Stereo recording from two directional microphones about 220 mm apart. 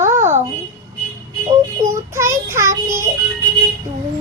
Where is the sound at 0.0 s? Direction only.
35° right (ahead or behind).